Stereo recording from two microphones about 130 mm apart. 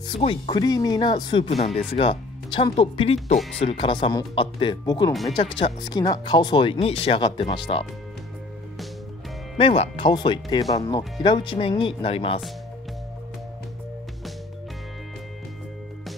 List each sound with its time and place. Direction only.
0.5 s speech: 30° left (ahead or behind)
9.6 s speech: 45° left (ahead or behind)